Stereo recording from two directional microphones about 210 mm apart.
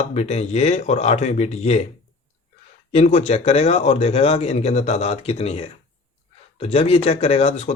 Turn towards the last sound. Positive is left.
turn(degrees=30)  # may be behind; listen again after turning